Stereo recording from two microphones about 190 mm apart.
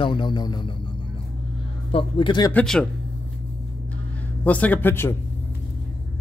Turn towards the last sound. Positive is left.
turn(degrees=10)  # may be behind; listen again after turning